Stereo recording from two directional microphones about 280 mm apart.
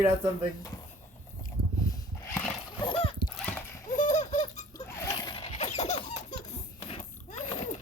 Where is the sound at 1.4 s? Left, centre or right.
Centre.